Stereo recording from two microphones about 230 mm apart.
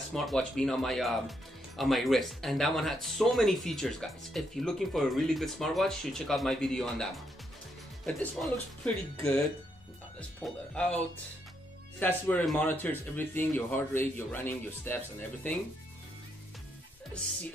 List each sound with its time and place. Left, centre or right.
0.1 s speech: centre
10.4 s speech: centre
12.0 s speech: centre